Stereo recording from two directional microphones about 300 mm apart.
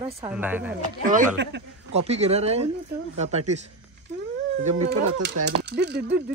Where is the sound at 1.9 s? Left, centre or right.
Right.